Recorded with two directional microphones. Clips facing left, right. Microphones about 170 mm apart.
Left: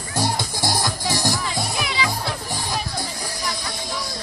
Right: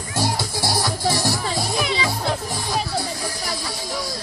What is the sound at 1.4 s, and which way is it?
Music, 35° right (ahead or behind).